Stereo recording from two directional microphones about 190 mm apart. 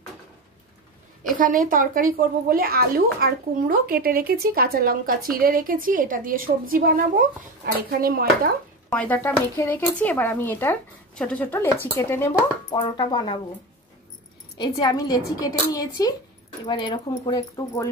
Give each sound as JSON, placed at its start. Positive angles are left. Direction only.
{"t": 1.4, "sound": "speech", "side_deg": -45}
{"t": 8.9, "sound": "speech", "side_deg": 10}
{"t": 12.7, "sound": "a woman's voice", "side_deg": 25}
{"t": 14.6, "sound": "a woman's voice", "side_deg": 20}